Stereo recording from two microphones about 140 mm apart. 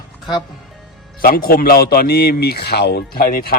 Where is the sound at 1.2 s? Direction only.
90° left.